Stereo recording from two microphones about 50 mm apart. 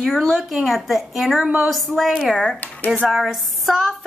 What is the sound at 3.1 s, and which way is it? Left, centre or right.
Speech, centre.